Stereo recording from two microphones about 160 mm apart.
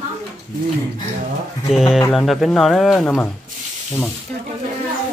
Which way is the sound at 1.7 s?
5° right (ahead or behind).